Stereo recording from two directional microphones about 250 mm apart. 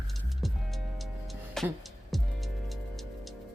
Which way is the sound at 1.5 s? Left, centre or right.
Centre.